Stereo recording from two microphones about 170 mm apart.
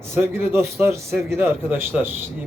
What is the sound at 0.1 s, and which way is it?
A man's voice, 15° right (ahead or behind).